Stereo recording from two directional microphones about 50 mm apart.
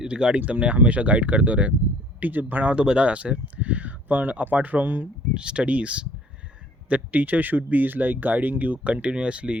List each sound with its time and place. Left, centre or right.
0.0 s speech: centre; by 2.7 s right
2.7 s speech: right
5.3 s speech: centre